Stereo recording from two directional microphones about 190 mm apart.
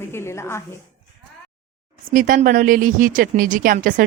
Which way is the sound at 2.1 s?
45° right (ahead or behind).